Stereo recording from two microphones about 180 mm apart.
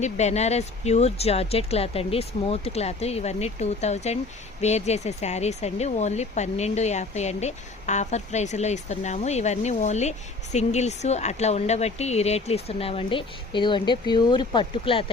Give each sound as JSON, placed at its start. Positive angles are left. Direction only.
{"t": 0.0, "sound": "speech", "side_deg": 40}